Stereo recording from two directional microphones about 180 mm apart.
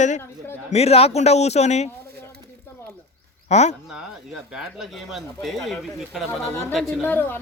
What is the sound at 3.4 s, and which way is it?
Speech, 40° left (ahead or behind).